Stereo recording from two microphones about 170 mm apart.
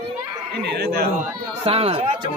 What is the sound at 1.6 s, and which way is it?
Speech, 35° right (ahead or behind).